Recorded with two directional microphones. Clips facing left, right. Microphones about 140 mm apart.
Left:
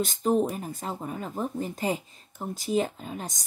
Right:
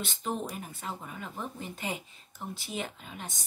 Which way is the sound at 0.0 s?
40° left (ahead or behind).